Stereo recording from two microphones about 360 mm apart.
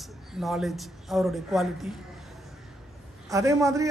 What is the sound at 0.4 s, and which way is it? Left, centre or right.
A man's voice, centre.